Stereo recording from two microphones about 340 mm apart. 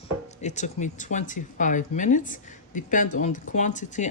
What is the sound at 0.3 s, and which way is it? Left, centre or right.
Speech, centre.